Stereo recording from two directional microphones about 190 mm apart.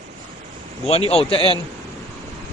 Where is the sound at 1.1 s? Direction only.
30° left (ahead or behind).